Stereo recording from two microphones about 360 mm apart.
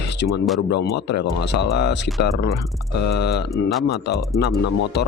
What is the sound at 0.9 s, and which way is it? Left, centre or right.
Speech, left.